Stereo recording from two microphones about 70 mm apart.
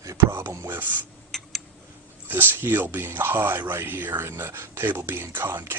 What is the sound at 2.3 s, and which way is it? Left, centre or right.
Speech, right.